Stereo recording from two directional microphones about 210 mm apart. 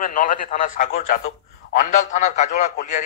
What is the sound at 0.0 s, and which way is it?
A man's voice, 40° left (ahead or behind).